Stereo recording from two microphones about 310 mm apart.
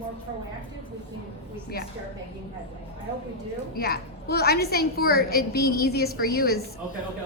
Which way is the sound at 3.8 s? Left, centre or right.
Left.